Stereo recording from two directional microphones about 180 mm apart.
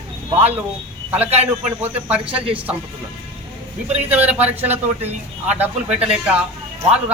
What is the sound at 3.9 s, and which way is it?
Speech, 10° right (ahead or behind).